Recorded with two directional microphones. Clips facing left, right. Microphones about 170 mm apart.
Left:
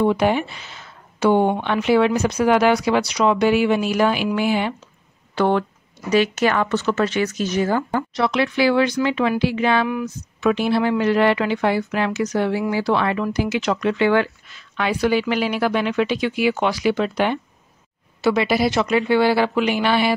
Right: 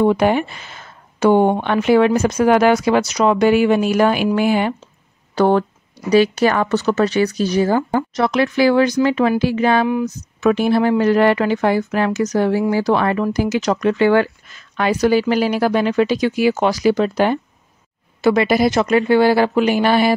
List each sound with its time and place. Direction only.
0.0 s a woman's voice: 50° right (ahead or behind); by 8.0 s 30° right (ahead or behind)
8.1 s a woman's voice: 45° right (ahead or behind)